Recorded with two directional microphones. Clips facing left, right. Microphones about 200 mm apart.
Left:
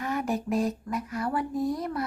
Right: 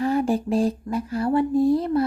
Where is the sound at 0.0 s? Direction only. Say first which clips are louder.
Right 8 dB; 30° right (ahead or behind).